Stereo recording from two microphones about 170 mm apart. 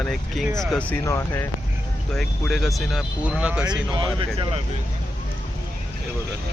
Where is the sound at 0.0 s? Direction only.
Centre (ahead or behind).